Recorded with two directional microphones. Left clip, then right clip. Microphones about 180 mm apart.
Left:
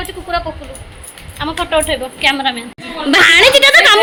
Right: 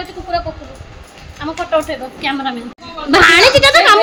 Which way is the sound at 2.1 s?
10° left (ahead or behind).